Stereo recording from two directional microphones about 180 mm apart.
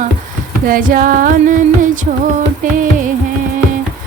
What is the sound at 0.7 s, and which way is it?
Music, 50° right (ahead or behind).